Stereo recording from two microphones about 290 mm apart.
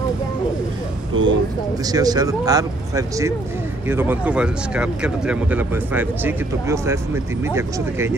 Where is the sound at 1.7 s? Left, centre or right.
Centre.